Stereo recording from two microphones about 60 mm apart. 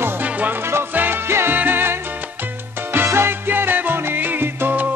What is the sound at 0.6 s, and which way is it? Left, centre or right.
Music, right.